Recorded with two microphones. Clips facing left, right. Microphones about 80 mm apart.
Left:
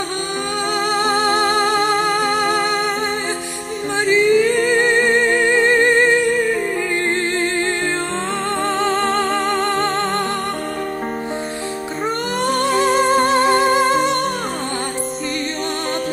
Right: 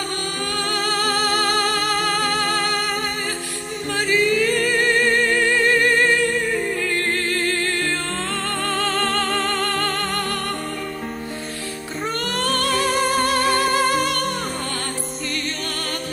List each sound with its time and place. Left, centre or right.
0.8 s music: left
4.0 s music: left
8.7 s music: left
12.4 s music: left